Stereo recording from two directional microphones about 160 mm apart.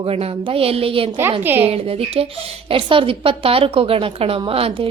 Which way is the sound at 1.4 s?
15° right (ahead or behind).